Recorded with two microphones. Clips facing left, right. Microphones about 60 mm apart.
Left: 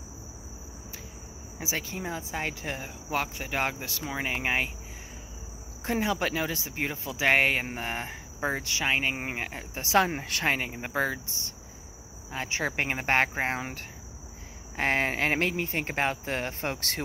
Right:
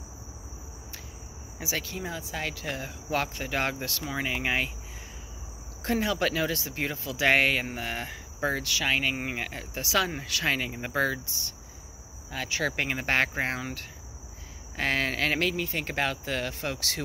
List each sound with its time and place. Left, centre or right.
1.6 s speech: left
3.1 s speech: centre
5.9 s speech: centre
9.8 s speech: left
10.7 s speech: centre
11.2 s speech: left